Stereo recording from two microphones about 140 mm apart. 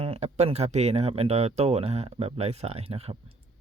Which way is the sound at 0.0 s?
45° right (ahead or behind).